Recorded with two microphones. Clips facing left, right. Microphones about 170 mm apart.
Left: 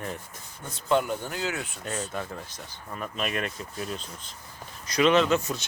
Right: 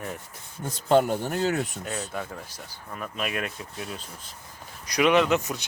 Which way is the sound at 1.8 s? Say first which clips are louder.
Even; centre (ahead or behind).